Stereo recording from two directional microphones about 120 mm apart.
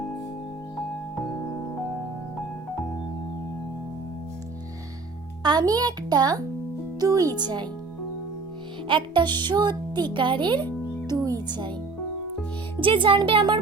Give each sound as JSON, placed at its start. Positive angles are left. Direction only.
{"t": 5.4, "sound": "speech", "side_deg": -35}
{"t": 8.9, "sound": "speech", "side_deg": -40}
{"t": 11.1, "sound": "music", "side_deg": -30}
{"t": 11.4, "sound": "speech", "side_deg": -35}
{"t": 12.8, "sound": "speech", "side_deg": -45}